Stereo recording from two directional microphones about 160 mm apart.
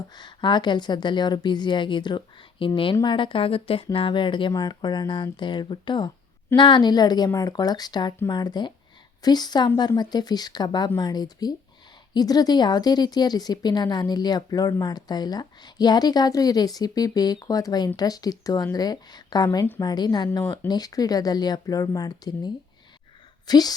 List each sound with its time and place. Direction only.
0.1 s speech: 30° left (ahead or behind)
20.4 s speech: 15° left (ahead or behind)
20.7 s speech: 25° left (ahead or behind)